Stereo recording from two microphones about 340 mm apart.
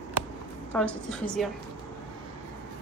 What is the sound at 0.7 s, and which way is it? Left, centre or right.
Speech, centre.